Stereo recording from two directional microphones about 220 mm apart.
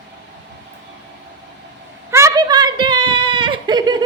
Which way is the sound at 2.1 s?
15° right (ahead or behind).